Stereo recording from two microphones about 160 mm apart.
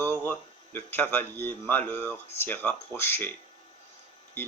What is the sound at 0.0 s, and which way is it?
Speech, 10° left (ahead or behind).